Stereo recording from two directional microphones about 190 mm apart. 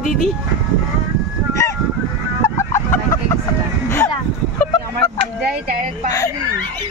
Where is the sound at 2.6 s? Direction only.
15° left (ahead or behind).